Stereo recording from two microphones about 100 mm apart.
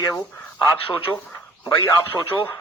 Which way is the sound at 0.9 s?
60° left (ahead or behind).